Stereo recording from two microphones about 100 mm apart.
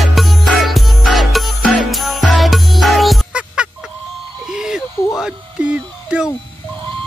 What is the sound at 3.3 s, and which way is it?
Music, 10° right (ahead or behind).